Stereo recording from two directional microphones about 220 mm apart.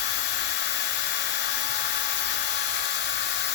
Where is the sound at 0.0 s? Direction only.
50° left (ahead or behind).